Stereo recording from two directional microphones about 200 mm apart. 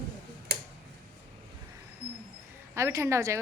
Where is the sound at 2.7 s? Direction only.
15° right (ahead or behind).